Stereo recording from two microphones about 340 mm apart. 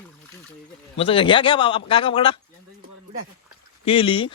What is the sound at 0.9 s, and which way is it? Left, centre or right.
A man's voice, centre.